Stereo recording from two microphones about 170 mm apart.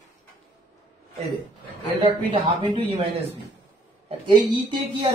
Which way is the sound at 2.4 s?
30° right (ahead or behind).